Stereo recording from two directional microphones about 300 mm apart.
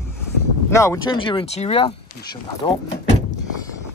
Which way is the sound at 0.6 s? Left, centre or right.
Centre.